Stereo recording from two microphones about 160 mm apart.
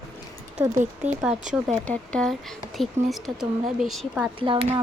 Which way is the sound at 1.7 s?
5° left (ahead or behind).